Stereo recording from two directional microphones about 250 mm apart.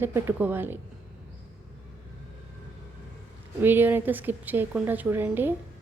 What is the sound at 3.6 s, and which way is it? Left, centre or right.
A woman's voice, centre.